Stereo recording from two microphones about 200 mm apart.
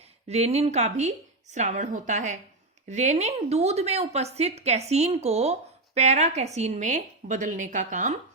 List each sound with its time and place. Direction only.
0.3 s a woman's voice: 30° right (ahead or behind)